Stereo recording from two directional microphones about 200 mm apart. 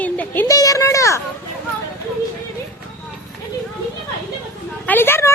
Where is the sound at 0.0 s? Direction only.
10° left (ahead or behind).